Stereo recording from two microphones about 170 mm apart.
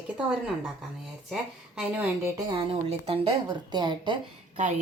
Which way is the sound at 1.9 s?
10° right (ahead or behind).